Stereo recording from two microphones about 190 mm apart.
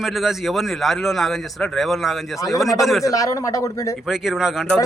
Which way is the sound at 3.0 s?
15° left (ahead or behind).